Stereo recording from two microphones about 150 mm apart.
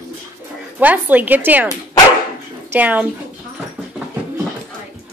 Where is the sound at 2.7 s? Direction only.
10° right (ahead or behind).